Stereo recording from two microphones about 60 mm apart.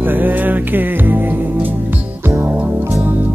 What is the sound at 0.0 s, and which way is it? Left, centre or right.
Music, right.